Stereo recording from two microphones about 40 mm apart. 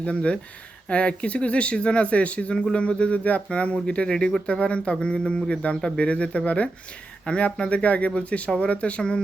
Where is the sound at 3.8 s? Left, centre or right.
Left.